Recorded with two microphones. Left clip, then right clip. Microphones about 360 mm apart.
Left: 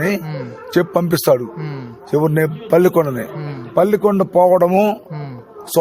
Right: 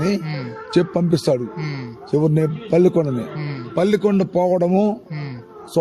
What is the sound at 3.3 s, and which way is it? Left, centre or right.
Speech, centre.